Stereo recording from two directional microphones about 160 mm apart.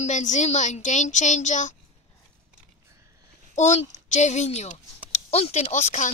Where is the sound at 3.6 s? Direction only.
45° left (ahead or behind).